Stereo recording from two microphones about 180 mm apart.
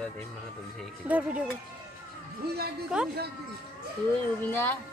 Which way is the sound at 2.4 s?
60° right (ahead or behind).